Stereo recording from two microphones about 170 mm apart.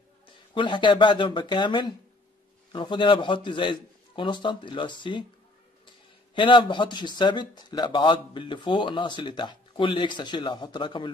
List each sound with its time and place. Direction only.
0.6 s a man's voice: 30° left (ahead or behind)
6.3 s a man's voice: 30° left (ahead or behind)